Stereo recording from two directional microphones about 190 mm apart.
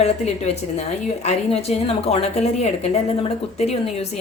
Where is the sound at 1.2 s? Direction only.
35° left (ahead or behind).